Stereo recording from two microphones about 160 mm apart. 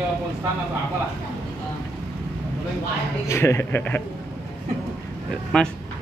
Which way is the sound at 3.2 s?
15° left (ahead or behind).